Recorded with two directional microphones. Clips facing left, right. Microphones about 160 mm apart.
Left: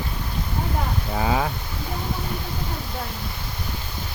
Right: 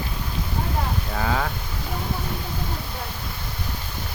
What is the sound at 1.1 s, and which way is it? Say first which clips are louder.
Speech: left 3 dB; 15° left (ahead or behind).